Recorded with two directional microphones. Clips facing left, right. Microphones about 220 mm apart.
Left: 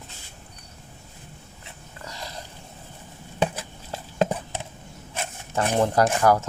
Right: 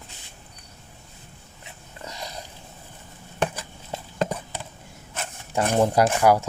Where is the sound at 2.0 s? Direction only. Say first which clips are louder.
Right 2 dB; 20° right (ahead or behind).